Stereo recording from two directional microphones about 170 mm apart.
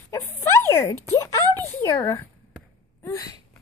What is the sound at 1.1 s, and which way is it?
Speech, 15° left (ahead or behind).